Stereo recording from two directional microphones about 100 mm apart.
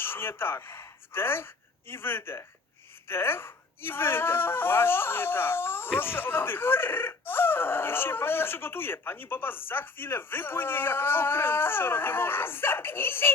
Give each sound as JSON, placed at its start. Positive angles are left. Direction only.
{"t": 0.0, "sound": "speech", "side_deg": 25}